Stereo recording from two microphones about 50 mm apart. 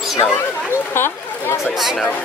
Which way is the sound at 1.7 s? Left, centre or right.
Centre.